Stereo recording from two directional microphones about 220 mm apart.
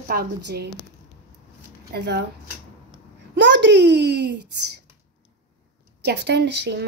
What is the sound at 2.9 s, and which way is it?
Babbling, 55° right (ahead or behind).